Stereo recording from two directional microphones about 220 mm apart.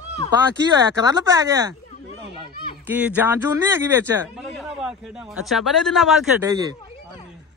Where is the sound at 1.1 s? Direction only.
15° right (ahead or behind).